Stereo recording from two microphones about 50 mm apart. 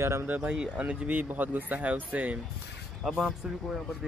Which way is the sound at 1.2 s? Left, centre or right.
Right.